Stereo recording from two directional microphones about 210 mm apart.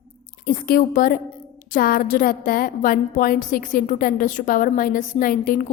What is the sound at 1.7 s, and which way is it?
A woman's voice, 45° left (ahead or behind).